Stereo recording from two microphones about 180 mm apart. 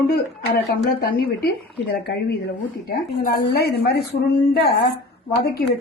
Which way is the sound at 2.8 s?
55° left (ahead or behind).